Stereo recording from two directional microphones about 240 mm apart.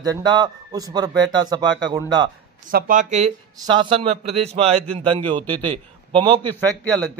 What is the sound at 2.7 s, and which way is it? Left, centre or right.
A man's voice, right.